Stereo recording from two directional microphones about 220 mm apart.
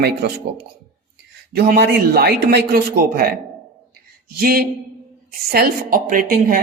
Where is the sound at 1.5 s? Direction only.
45° right (ahead or behind).